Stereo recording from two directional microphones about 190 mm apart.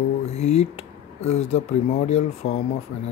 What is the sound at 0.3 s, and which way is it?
Speech, 35° left (ahead or behind).